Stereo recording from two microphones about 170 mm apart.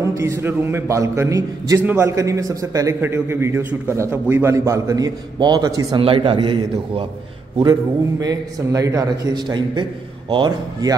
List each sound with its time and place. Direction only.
0.0 s a man's voice: 15° right (ahead or behind)
8.2 s a man's voice: 20° right (ahead or behind)